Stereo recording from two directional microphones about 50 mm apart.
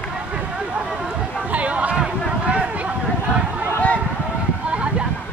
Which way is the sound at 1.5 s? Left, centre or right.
Right.